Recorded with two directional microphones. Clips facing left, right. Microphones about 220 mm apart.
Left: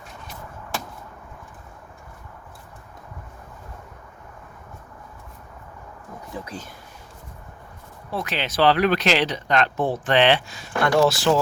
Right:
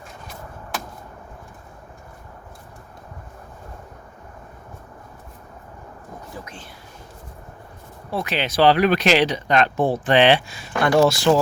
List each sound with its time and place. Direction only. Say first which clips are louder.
6.4 s speech: left 4 dB; 35° left (ahead or behind)
8.1 s speech: right 3 dB; 10° right (ahead or behind)
11.1 s speech: right 3 dB; 5° left (ahead or behind)